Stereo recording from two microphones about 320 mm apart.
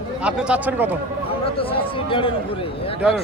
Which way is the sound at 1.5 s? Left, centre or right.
Centre.